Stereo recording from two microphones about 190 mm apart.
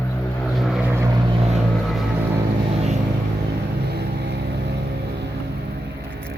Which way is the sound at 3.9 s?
60° right (ahead or behind).